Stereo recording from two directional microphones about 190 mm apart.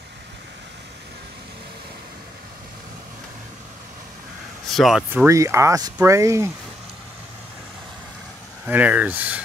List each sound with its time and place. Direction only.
4.7 s speech: centre (ahead or behind)
5.2 s speech: 15° right (ahead or behind)
8.6 s speech: 10° right (ahead or behind)